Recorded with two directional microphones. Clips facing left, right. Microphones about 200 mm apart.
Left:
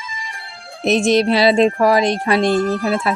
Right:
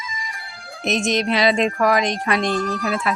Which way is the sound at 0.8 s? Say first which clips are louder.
Left 6 dB; 30° left (ahead or behind).